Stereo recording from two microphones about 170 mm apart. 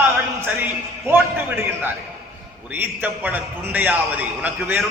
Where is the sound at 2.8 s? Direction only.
10° right (ahead or behind).